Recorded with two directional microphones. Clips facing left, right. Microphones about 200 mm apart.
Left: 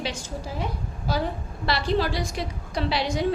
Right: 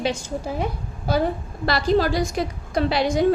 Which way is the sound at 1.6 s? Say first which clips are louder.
Right 5 dB; 45° right (ahead or behind).